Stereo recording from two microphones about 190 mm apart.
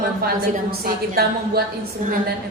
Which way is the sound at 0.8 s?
55° right (ahead or behind).